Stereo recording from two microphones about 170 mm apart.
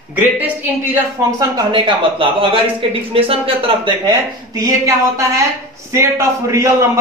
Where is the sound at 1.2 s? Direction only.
15° right (ahead or behind).